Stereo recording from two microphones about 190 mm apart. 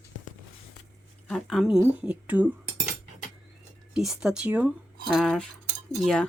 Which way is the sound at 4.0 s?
5° right (ahead or behind).